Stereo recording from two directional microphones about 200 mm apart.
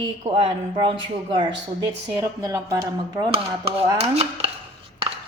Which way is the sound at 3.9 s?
30° right (ahead or behind).